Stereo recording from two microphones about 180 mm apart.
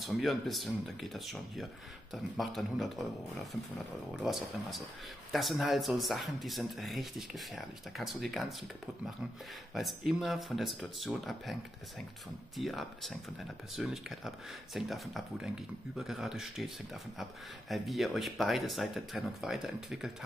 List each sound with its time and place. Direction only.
0.0 s speech: centre (ahead or behind)
9.8 s speech: centre (ahead or behind)
12.5 s speech: centre (ahead or behind)